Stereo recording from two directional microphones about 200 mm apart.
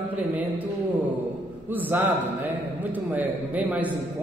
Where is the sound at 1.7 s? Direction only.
10° right (ahead or behind).